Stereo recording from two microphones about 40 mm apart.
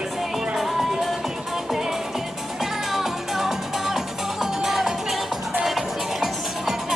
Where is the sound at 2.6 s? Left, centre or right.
Centre.